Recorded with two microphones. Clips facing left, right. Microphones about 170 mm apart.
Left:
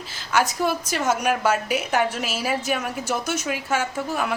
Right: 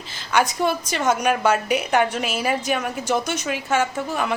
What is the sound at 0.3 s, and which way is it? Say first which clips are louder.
A woman's voice: right 2 dB; 5° left (ahead or behind).